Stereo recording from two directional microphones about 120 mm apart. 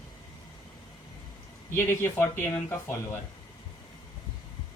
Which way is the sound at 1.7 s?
20° left (ahead or behind).